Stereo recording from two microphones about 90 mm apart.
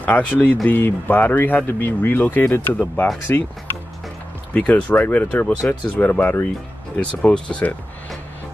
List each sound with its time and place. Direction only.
0.0 s speech: 15° left (ahead or behind)
4.6 s speech: 15° left (ahead or behind)